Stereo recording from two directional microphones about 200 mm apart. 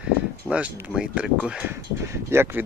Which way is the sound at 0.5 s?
5° right (ahead or behind).